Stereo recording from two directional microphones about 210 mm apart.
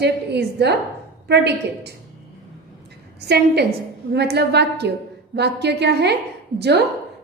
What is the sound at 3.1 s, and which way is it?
A woman's voice, 50° right (ahead or behind).